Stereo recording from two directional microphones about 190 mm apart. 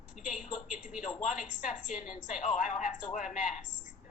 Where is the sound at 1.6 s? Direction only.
40° left (ahead or behind).